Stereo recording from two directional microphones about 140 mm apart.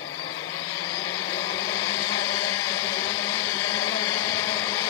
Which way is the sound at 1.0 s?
25° left (ahead or behind).